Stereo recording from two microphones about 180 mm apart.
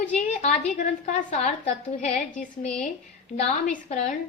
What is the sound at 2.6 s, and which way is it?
Speech, 5° left (ahead or behind).